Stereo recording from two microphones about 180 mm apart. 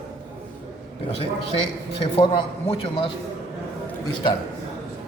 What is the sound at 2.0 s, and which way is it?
A man's voice, 25° left (ahead or behind).